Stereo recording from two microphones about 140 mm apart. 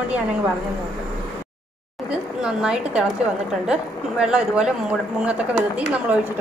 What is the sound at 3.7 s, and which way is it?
Speech, 5° right (ahead or behind).